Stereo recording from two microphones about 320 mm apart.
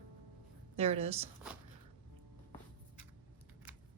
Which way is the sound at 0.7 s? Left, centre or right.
Centre.